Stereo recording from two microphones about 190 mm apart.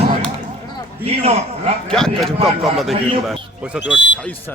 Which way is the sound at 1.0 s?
35° right (ahead or behind).